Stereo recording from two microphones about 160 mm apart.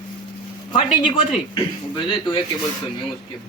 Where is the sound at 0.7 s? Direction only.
25° left (ahead or behind).